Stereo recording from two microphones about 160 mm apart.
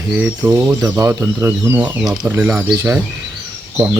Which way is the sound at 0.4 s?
15° right (ahead or behind).